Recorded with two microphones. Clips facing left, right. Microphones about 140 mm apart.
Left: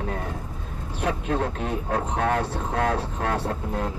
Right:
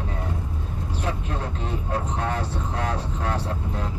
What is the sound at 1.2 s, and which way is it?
A man's voice, 60° left (ahead or behind).